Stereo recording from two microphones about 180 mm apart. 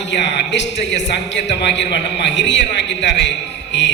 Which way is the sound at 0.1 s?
80° left.